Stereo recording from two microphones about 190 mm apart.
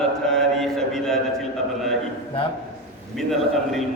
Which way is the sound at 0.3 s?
Centre (ahead or behind).